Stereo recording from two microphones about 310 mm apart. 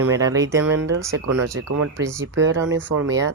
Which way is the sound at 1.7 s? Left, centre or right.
Right.